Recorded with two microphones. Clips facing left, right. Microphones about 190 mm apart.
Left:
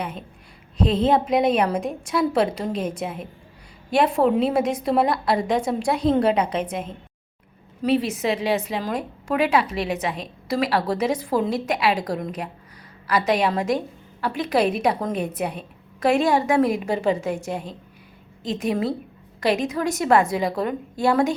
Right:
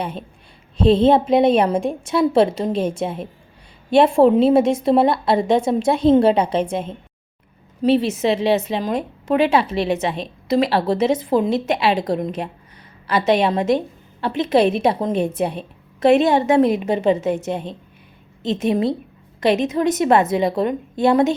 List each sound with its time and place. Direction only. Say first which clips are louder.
0.8 s a woman's voice: right 6 dB; 30° right (ahead or behind)